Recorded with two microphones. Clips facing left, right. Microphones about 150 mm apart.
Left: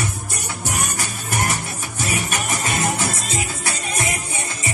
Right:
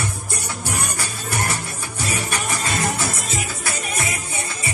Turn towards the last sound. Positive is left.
turn(degrees=20)  # may be behind; listen again after turning